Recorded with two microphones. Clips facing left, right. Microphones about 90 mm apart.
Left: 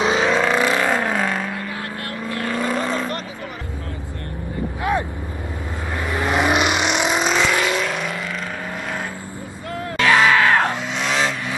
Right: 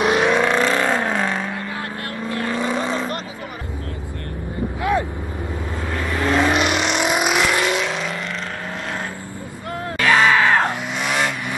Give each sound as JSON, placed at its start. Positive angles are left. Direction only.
{"t": 0.0, "sound": "vehicle", "side_deg": -5}
{"t": 2.2, "sound": "vehicle", "side_deg": -25}
{"t": 2.5, "sound": "vehicle", "side_deg": 0}
{"t": 5.9, "sound": "vehicle", "side_deg": 15}
{"t": 7.1, "sound": "vehicle", "side_deg": -10}
{"t": 9.9, "sound": "music", "side_deg": 0}
{"t": 10.3, "sound": "vehicle", "side_deg": -15}